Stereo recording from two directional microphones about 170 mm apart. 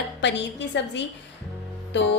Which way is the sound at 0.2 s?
90° left.